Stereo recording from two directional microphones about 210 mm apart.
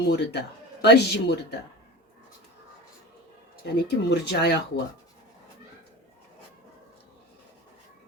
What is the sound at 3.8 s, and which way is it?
Speech, 50° left (ahead or behind).